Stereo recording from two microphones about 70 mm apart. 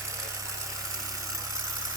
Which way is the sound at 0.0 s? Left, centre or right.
Right.